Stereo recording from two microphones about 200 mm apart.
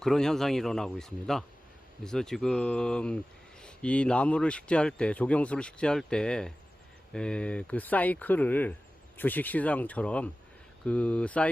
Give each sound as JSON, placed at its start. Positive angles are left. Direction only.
{"t": 0.0, "sound": "speech", "side_deg": 0}